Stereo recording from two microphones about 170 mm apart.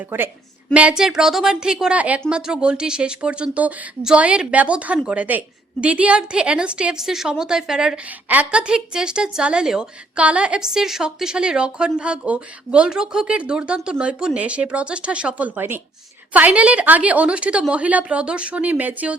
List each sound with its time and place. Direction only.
0.0 s a woman's voice: 10° right (ahead or behind)